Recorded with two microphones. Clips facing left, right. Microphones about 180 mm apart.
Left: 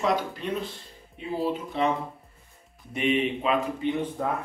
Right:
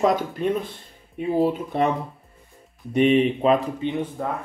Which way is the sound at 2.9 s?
40° right (ahead or behind).